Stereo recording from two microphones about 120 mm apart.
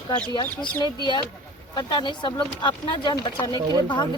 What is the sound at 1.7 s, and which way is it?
Speech, 35° left (ahead or behind).